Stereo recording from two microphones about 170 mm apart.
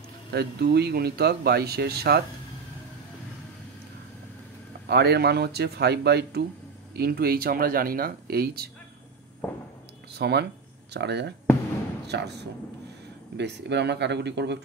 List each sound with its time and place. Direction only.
0.3 s speech: 70° right (ahead or behind)
4.8 s speech: 75° right (ahead or behind)
7.0 s speech: 65° right (ahead or behind)
9.4 s a sound: 10° left (ahead or behind)
10.1 s speech: 75° right (ahead or behind)
13.4 s speech: 85° right